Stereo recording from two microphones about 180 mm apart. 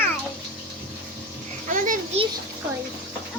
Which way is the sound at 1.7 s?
50° right (ahead or behind).